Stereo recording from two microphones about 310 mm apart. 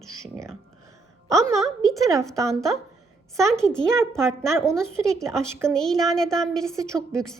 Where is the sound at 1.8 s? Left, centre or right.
Centre.